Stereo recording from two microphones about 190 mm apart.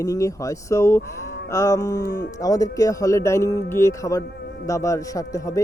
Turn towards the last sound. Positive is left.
turn(degrees=15)  # may be behind; listen again after turning